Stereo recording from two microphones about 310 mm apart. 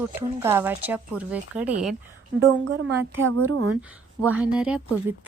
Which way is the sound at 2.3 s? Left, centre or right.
Right.